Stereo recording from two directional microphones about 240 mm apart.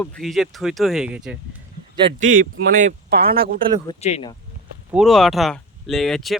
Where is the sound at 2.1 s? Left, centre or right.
Right.